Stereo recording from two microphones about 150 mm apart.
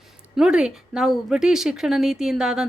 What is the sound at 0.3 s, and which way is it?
Speech, 5° right (ahead or behind).